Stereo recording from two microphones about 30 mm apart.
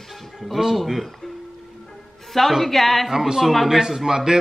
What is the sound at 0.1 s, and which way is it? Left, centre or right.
Music, centre.